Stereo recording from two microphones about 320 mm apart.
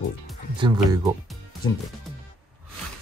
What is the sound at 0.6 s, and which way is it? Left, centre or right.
Speech, centre.